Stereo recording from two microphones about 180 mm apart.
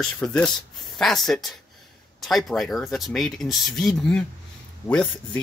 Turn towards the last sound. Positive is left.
turn(degrees=5)  # may be behind; listen again after turning